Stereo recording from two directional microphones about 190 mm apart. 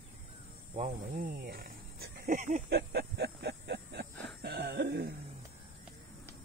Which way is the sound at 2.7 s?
60° right (ahead or behind).